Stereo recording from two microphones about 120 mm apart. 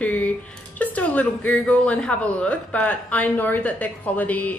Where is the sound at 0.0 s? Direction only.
10° left (ahead or behind).